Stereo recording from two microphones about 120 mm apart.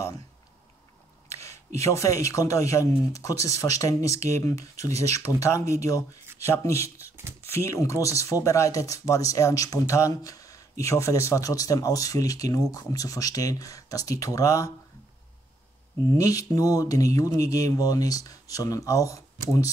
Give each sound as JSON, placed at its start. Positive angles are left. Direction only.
{"t": 1.8, "sound": "speech", "side_deg": 25}
{"t": 7.1, "sound": "a sound", "side_deg": -20}
{"t": 7.6, "sound": "speech", "side_deg": 25}
{"t": 16.2, "sound": "speech", "side_deg": 30}